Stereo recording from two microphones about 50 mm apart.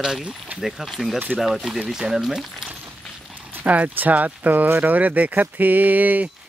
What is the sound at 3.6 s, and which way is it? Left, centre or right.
Speech, right.